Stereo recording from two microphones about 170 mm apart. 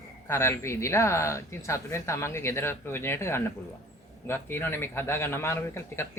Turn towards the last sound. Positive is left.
turn(degrees=15)  # may be behind; listen again after turning